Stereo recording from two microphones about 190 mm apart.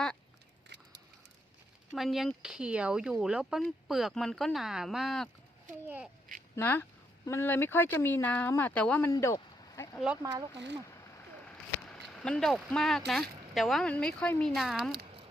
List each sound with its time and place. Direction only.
2.0 s speech: centre (ahead or behind)
6.6 s speech: 10° left (ahead or behind)
10.5 s speech: 65° right (ahead or behind)
11.4 s a sound: 5° left (ahead or behind)
13.1 s speech: centre (ahead or behind)